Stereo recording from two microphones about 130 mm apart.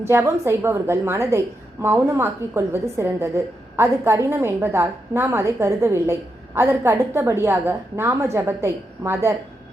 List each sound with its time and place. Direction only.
0.0 s a woman's voice: 20° right (ahead or behind)